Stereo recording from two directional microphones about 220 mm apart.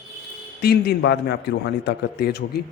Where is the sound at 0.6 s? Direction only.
50° left (ahead or behind).